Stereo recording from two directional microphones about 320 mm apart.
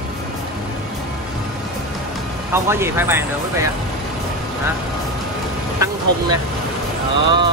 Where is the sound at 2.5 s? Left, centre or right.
Centre.